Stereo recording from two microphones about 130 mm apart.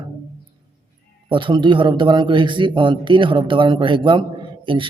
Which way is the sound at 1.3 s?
40° right (ahead or behind).